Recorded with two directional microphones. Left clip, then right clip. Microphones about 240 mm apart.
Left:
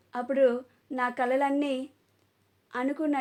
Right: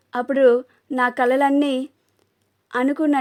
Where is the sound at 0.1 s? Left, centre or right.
Right.